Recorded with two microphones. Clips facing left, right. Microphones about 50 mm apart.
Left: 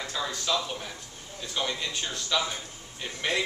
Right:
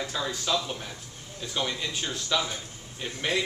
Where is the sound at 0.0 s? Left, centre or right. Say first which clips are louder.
Right 1 dB; centre.